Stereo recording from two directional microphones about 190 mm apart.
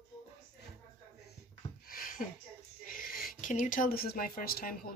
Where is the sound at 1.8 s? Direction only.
50° left (ahead or behind).